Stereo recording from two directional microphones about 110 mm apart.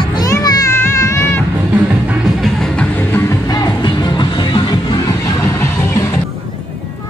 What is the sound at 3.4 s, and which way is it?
Music, 35° left (ahead or behind).